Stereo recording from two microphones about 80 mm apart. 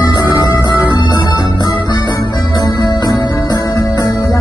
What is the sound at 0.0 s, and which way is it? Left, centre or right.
Music, left.